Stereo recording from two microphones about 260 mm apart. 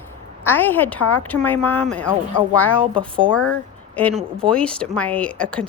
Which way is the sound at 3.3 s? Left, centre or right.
Left.